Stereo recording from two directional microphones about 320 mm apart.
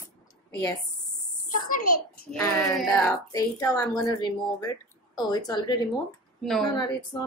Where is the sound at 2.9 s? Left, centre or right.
Centre.